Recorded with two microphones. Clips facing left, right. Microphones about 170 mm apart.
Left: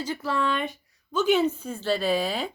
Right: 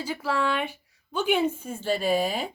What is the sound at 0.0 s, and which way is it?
Speech, 10° right (ahead or behind).